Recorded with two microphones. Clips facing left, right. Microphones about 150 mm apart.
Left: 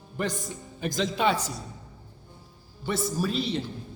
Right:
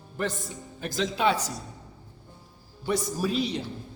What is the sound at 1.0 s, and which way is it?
Speech, centre (ahead or behind).